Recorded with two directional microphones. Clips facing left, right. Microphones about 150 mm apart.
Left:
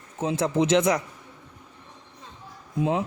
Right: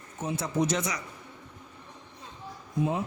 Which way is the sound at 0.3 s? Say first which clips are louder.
Left 6 dB; 90° left.